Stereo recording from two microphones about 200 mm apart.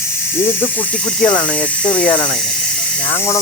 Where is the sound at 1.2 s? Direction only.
5° left (ahead or behind).